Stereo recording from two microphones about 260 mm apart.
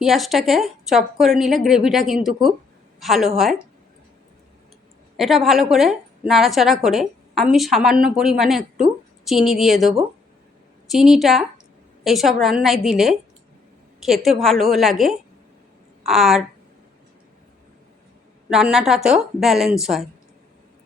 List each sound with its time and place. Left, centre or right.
0.0 s a woman's voice: centre
5.1 s a woman's voice: centre
18.5 s a woman's voice: centre